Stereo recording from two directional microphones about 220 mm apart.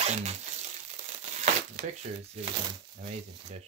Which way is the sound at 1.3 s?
30° right (ahead or behind).